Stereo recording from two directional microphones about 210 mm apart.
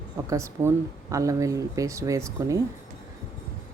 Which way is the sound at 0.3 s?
15° right (ahead or behind).